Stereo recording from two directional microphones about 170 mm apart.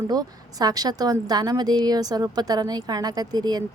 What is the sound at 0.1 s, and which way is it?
A woman's voice, 20° right (ahead or behind).